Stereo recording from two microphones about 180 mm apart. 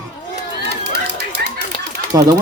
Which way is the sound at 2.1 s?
15° right (ahead or behind).